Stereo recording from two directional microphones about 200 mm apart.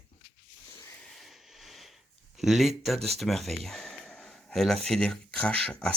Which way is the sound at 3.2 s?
Centre (ahead or behind).